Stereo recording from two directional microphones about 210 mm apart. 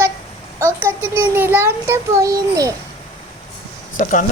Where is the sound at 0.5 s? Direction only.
10° right (ahead or behind).